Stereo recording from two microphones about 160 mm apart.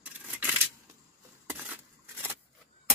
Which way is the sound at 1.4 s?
10° right (ahead or behind).